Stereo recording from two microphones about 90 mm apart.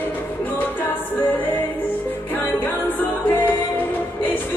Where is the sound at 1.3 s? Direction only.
20° left (ahead or behind).